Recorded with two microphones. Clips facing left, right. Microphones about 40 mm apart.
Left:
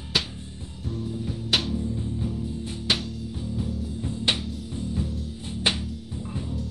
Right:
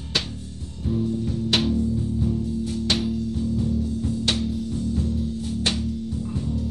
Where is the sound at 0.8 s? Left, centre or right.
Centre.